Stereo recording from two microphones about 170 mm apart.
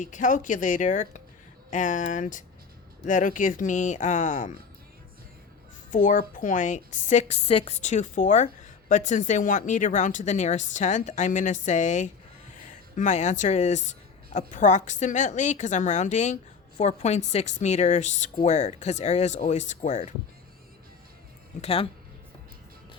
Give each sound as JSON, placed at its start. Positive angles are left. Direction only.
{"t": 0.0, "sound": "a woman's voice", "side_deg": 50}
{"t": 5.9, "sound": "a woman's voice", "side_deg": 50}
{"t": 21.6, "sound": "speech", "side_deg": 35}